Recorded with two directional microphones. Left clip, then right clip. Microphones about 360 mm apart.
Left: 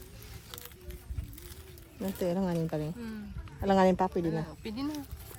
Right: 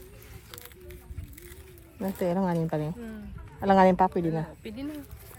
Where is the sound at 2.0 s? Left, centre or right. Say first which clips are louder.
Right 4 dB; centre.